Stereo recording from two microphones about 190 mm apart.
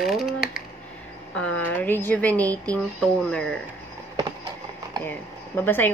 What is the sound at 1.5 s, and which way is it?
Speech, 10° left (ahead or behind).